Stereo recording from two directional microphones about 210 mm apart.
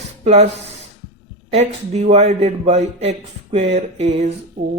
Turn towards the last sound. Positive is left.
turn(degrees=-35)  # may be behind; listen again after turning